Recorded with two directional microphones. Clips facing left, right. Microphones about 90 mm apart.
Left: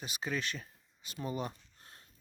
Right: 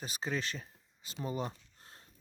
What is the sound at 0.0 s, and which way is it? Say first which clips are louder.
Speech: even; 35° right (ahead or behind).